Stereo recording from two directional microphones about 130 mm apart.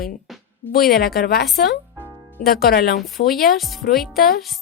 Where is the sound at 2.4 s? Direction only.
90° left.